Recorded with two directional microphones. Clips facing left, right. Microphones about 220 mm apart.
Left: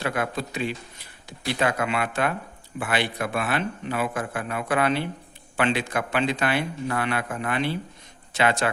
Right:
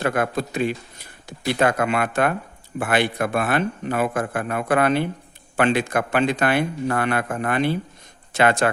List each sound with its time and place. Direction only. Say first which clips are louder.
0.0 s a man's voice: right 5 dB; 50° right (ahead or behind)